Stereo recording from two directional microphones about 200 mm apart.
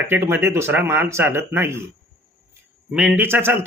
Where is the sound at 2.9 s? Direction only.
5° right (ahead or behind).